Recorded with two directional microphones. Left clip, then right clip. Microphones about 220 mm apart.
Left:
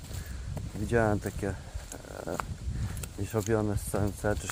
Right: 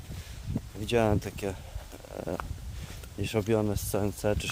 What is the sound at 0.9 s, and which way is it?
Speech, 40° right (ahead or behind).